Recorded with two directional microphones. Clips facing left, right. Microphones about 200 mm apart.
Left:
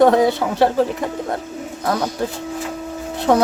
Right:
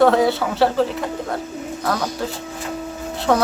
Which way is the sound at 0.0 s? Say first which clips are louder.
Left 2 dB; 15° left (ahead or behind).